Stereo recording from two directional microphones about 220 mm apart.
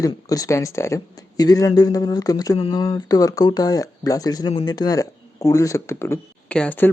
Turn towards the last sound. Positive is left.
turn(degrees=10)  # may be behind; listen again after turning